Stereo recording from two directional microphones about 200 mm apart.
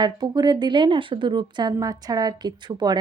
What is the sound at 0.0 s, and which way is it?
A woman's voice, 20° right (ahead or behind).